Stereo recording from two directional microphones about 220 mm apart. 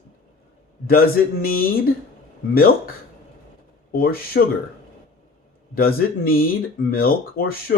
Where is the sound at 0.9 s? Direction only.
40° left (ahead or behind).